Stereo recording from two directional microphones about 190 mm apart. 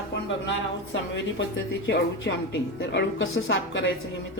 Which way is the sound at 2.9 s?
70° left (ahead or behind).